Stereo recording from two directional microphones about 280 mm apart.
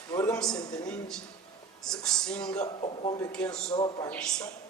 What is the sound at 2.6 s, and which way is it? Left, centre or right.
Speech, centre.